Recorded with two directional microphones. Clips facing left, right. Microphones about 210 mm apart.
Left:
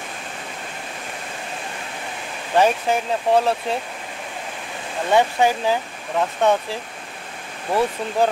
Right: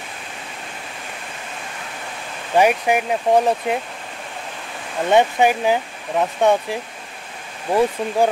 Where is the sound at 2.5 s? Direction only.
15° right (ahead or behind).